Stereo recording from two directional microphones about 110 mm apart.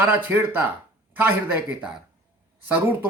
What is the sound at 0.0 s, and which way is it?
Speech, 15° right (ahead or behind).